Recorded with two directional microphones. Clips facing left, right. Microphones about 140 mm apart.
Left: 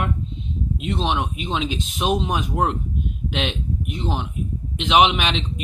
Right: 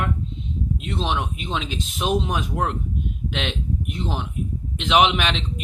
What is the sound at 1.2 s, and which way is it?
Speech, 5° left (ahead or behind).